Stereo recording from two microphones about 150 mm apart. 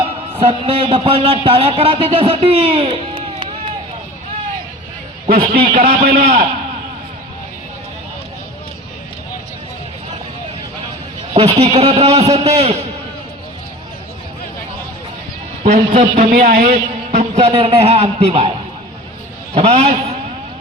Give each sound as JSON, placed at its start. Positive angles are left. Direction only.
{"t": 0.3, "sound": "a man's voice", "side_deg": -35}
{"t": 5.5, "sound": "a man's voice", "side_deg": -45}
{"t": 11.3, "sound": "a man's voice", "side_deg": -45}
{"t": 15.6, "sound": "a man's voice", "side_deg": -50}
{"t": 19.5, "sound": "a man's voice", "side_deg": -45}